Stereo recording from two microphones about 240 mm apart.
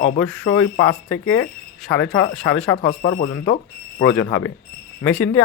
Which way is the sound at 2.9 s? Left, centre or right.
Left.